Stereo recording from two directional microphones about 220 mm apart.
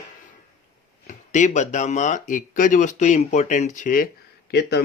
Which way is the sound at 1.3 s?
35° left (ahead or behind).